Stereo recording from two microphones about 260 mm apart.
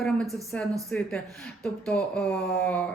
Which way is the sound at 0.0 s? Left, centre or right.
Centre.